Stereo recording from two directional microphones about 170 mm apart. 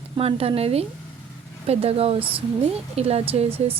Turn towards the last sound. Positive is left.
turn(degrees=-35)  # may be behind; listen again after turning